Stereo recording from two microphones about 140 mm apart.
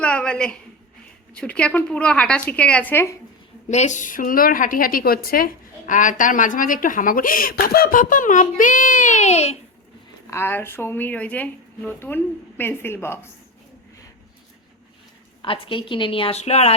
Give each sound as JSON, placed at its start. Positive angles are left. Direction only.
{"t": 0.0, "sound": "a woman's voice", "side_deg": 10}
{"t": 3.7, "sound": "a woman's voice", "side_deg": 55}
{"t": 10.2, "sound": "speech", "side_deg": 15}
{"t": 15.4, "sound": "a woman's voice", "side_deg": 40}